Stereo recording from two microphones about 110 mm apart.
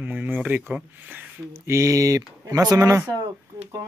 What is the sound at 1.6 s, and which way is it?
Speech, 25° right (ahead or behind).